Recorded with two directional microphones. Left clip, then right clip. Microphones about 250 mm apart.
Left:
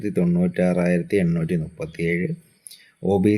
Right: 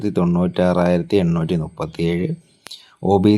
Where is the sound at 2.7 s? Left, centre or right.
Centre.